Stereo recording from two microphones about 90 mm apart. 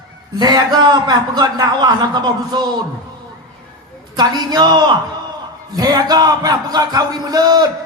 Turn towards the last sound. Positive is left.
turn(degrees=-50)  # may be behind; listen again after turning